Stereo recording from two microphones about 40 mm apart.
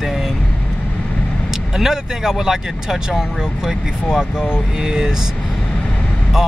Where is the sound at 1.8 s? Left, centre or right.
Centre.